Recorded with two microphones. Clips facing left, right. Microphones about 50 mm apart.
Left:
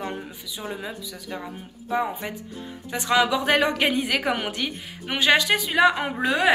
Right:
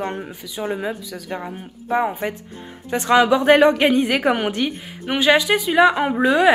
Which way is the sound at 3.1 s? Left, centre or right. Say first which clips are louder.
Right 7 dB; right.